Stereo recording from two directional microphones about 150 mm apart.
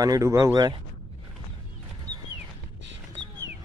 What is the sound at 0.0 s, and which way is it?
Speech, 20° right (ahead or behind).